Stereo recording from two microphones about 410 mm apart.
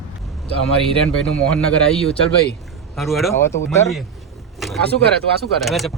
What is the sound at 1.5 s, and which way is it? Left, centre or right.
Speech, centre.